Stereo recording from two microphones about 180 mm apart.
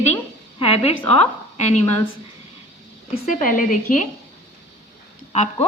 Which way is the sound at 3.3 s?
45° left (ahead or behind).